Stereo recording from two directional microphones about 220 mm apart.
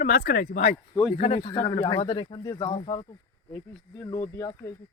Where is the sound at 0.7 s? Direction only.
15° left (ahead or behind).